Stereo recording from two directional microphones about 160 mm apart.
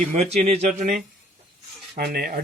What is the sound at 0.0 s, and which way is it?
Speech, 45° right (ahead or behind).